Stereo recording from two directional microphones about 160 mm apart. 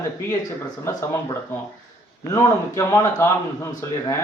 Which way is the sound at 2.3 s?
20° left (ahead or behind).